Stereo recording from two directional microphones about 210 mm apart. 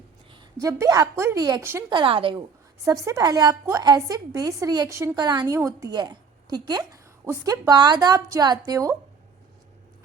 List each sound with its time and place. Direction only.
0.6 s a woman's voice: 15° right (ahead or behind)